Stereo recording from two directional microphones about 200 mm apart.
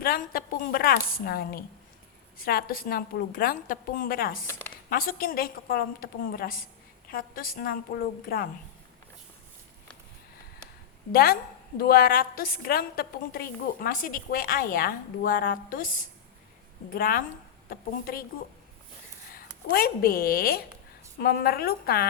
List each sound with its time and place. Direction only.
0.0 s a woman's voice: 45° left (ahead or behind)
11.1 s a woman's voice: 50° left (ahead or behind)
16.9 s a woman's voice: 45° left (ahead or behind)
19.3 s a woman's voice: 50° left (ahead or behind)